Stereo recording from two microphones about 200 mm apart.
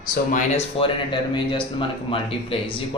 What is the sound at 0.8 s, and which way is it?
Speech, 25° left (ahead or behind).